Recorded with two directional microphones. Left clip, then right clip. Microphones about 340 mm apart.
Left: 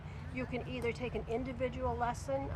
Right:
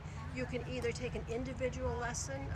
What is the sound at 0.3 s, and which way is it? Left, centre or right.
Speech, centre.